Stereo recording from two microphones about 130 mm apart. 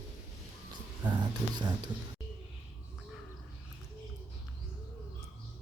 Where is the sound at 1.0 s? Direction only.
35° right (ahead or behind).